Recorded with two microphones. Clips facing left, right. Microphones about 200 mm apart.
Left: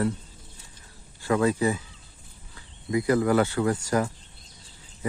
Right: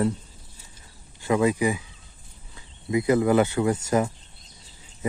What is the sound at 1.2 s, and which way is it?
Speech, 15° right (ahead or behind).